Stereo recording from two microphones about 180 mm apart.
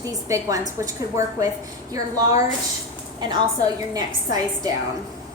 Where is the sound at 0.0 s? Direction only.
20° right (ahead or behind).